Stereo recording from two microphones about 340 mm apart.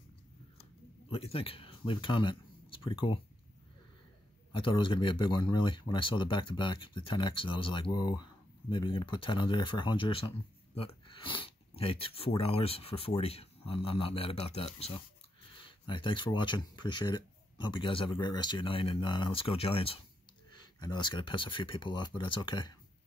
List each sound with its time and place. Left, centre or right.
1.1 s speech: centre
4.5 s speech: centre